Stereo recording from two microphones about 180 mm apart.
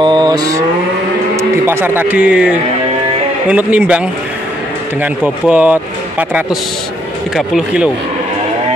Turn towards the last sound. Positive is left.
turn(degrees=-5)  # may be behind; listen again after turning